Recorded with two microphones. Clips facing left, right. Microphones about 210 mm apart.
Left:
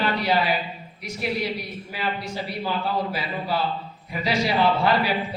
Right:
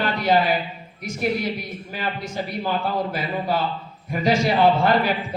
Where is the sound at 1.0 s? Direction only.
45° right (ahead or behind).